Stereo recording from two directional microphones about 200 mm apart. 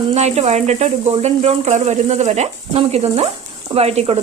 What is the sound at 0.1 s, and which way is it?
Speech, 35° right (ahead or behind).